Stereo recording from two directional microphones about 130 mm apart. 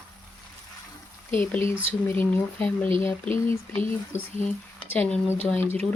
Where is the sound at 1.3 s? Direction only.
15° left (ahead or behind).